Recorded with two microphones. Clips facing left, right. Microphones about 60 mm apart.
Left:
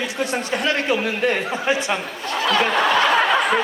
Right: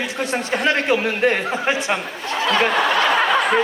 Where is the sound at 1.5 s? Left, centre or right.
Centre.